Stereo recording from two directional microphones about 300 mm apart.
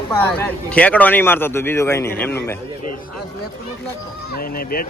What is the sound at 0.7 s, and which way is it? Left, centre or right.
A man's voice, centre.